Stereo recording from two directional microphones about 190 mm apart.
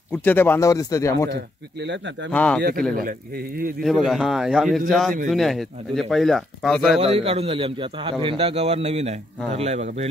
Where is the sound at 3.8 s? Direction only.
Centre (ahead or behind).